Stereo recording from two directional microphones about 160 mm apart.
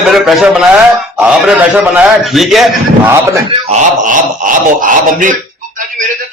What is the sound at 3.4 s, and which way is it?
Speech, 45° right (ahead or behind).